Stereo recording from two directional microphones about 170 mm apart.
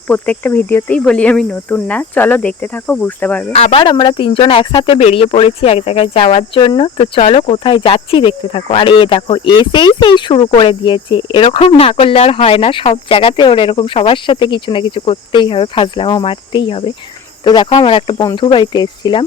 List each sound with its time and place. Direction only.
0.1 s speech: 10° left (ahead or behind)
3.5 s speech: 35° left (ahead or behind)